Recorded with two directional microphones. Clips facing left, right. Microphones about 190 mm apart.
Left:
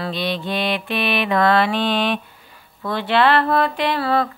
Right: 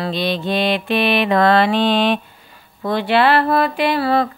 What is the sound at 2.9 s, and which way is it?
Speech, 10° right (ahead or behind).